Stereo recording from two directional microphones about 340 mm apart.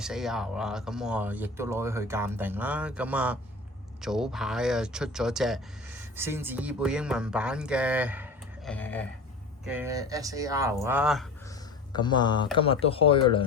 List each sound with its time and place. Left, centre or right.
0.0 s speech: centre
9.6 s speech: centre
11.9 s speech: centre